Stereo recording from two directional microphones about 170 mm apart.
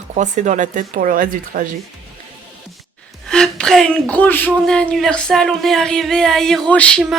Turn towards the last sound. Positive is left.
turn(degrees=5)  # may be behind; listen again after turning